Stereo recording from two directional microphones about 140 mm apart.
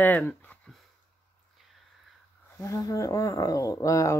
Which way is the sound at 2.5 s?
25° left (ahead or behind).